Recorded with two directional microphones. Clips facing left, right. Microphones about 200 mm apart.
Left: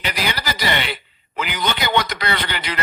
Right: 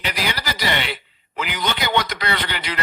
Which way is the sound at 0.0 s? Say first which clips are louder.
Left 1 dB; 55° left (ahead or behind).